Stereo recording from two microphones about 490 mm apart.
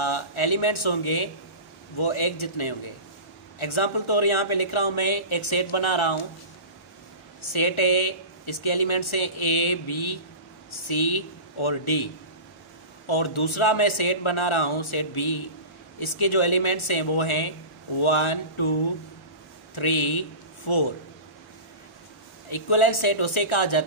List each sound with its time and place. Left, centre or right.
0.0 s speech: left
7.5 s speech: left
22.5 s speech: left